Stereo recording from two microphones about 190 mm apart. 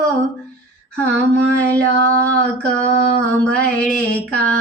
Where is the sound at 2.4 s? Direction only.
5° left (ahead or behind).